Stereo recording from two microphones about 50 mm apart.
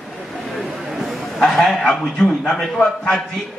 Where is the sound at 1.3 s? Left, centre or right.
Centre.